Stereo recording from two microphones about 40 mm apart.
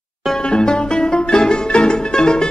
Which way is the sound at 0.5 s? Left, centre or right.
Left.